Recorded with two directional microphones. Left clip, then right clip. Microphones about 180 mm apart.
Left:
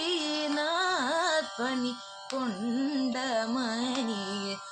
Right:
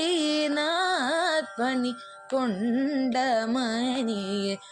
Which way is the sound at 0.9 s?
20° right (ahead or behind).